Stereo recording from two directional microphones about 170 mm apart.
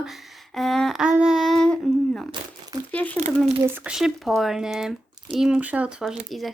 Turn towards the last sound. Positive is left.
turn(degrees=0)  # may be behind; listen again after turning